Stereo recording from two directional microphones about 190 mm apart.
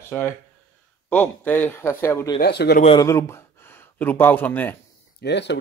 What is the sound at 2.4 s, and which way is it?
Speech, 60° left (ahead or behind).